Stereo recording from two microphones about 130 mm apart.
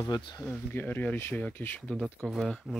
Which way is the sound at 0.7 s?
15° left (ahead or behind).